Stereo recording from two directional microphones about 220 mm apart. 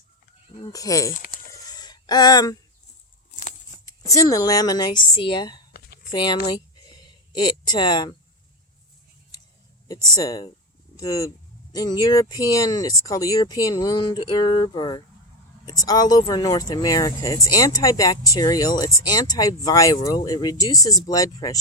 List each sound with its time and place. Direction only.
0.6 s speech: 15° left (ahead or behind)
1.1 s speech: 40° left (ahead or behind)
1.6 s gasp: 20° left (ahead or behind)
3.8 s speech: 15° left (ahead or behind)
6.1 s a sound: 20° left (ahead or behind)
10.2 s speech: 20° left (ahead or behind)